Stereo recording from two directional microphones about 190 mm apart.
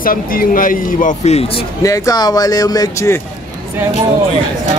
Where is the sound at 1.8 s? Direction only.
20° left (ahead or behind).